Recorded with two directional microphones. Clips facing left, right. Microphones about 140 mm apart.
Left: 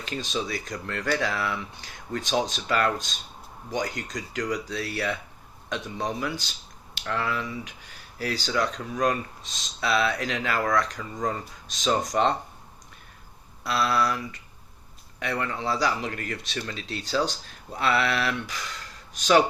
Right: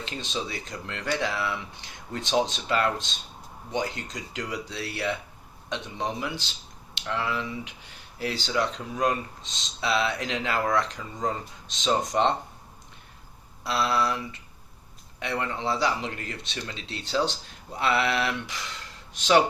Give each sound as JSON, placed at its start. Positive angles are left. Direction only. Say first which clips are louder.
{"t": 0.0, "sound": "speech", "louder": "left 2 dB", "side_deg": -25}
{"t": 13.7, "sound": "speech", "louder": "left 1 dB", "side_deg": -25}